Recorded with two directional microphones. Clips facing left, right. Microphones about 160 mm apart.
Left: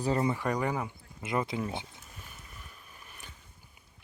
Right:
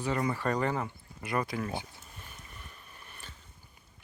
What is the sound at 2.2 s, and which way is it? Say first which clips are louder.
Boat: right 1 dB; 5° left (ahead or behind).